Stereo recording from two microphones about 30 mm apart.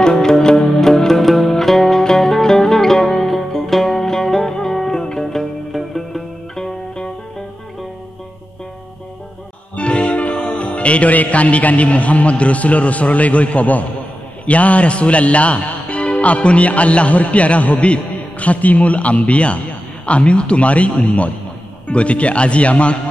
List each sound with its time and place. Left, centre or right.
0.0 s music: left
1.2 s music: centre
6.5 s music: centre
9.8 s music: left
11.1 s a man's voice: left
17.7 s a man's voice: left